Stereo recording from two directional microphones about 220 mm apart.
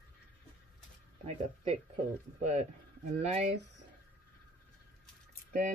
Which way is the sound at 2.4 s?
30° right (ahead or behind).